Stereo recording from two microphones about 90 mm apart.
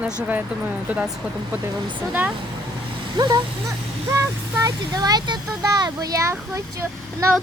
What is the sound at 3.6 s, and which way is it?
Speech, 35° right (ahead or behind).